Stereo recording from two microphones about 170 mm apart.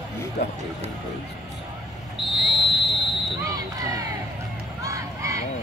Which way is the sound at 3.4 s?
20° right (ahead or behind).